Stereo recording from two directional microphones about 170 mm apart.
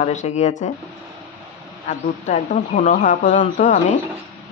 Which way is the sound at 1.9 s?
50° left (ahead or behind).